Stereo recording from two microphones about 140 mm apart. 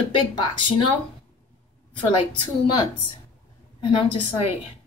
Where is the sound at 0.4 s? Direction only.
35° left (ahead or behind).